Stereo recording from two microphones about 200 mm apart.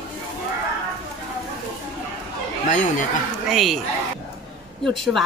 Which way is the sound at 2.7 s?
40° left (ahead or behind).